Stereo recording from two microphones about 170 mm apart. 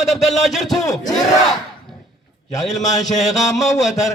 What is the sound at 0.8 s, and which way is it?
Speech, 20° left (ahead or behind).